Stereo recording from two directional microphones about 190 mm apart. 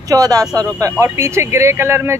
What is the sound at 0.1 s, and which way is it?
Speech, 20° right (ahead or behind).